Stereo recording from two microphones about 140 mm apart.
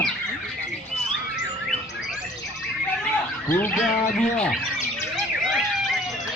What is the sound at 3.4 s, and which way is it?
Speech, 15° left (ahead or behind).